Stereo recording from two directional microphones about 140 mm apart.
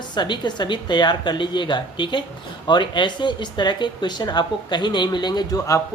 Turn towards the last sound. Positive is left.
turn(degrees=25)  # may be behind; listen again after turning